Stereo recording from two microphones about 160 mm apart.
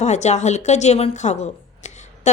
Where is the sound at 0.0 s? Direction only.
45° left (ahead or behind).